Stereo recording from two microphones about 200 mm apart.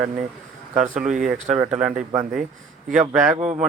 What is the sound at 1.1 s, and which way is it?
Speech, 5° right (ahead or behind).